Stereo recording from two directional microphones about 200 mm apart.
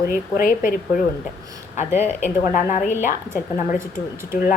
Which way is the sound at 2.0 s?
40° left (ahead or behind).